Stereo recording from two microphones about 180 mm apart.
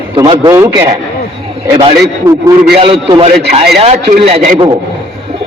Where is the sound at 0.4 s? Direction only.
15° right (ahead or behind).